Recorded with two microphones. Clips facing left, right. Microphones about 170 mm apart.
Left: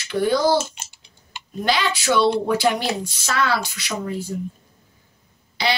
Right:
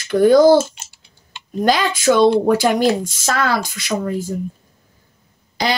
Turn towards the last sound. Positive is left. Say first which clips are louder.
# right 3 dB
turn(degrees=-45)  # may be behind; listen again after turning